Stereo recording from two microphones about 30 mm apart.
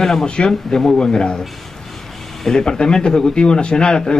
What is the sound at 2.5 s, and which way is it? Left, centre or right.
A man's voice, left.